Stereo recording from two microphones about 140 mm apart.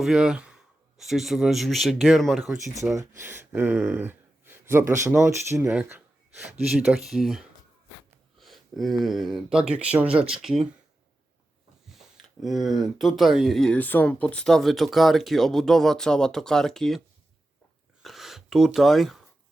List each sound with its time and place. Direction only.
0.0 s speech: 5° right (ahead or behind)
3.2 s speech: 15° right (ahead or behind)
6.7 s speech: 5° right (ahead or behind)
12.4 s speech: centre (ahead or behind)
18.0 s a sound: centre (ahead or behind)